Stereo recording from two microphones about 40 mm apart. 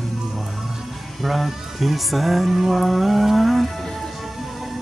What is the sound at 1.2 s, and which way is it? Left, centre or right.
Music, centre.